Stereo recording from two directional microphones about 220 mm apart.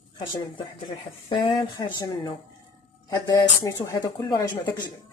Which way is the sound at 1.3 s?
20° left (ahead or behind).